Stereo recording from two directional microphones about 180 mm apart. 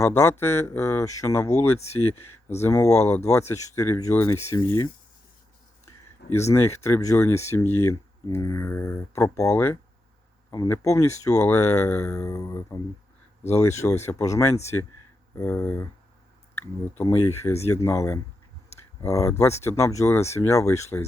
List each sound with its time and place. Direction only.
0.0 s speech: 15° left (ahead or behind)
3.0 s speech: 40° left (ahead or behind)
3.3 s speech: 15° left (ahead or behind)
6.5 s speech: 15° left (ahead or behind)
13.8 s speech: 15° left (ahead or behind)
17.0 s speech: 15° left (ahead or behind)